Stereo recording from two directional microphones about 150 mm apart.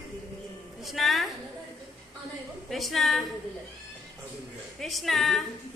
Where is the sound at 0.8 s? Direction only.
Centre (ahead or behind).